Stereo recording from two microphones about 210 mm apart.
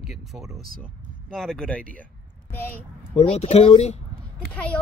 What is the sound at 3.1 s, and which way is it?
Speech, 30° left (ahead or behind).